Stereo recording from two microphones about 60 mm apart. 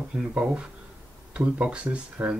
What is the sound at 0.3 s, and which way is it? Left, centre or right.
Speech, centre.